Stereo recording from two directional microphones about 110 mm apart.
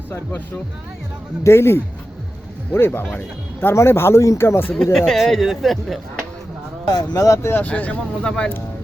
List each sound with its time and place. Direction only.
0.1 s speech: 15° left (ahead or behind)
4.7 s speech: 5° left (ahead or behind)
6.8 s speech: 35° left (ahead or behind)
7.6 s speech: 15° left (ahead or behind)